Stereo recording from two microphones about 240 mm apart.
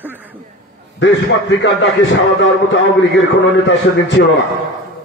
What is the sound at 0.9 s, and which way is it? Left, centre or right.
A man's voice, left.